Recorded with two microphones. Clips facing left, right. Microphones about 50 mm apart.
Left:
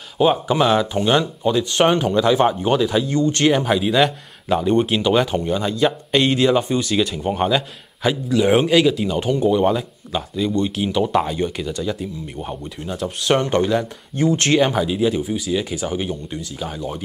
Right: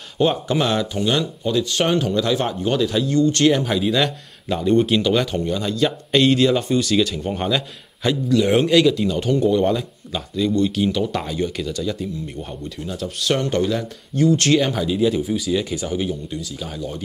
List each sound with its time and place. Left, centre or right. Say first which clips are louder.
0.2 s speech: left 3 dB; centre
0.9 s speech: left 3 dB; left
14.6 s speech: left 2 dB; centre